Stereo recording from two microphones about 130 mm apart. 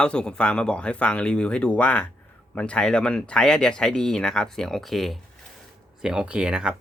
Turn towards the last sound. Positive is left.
turn(degrees=-5)  # may be behind; listen again after turning